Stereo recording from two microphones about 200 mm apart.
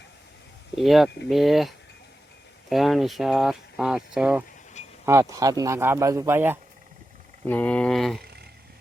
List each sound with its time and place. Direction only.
0.8 s speech: centre (ahead or behind)
7.4 s speech: 10° left (ahead or behind)
8.2 s a sound: 55° right (ahead or behind)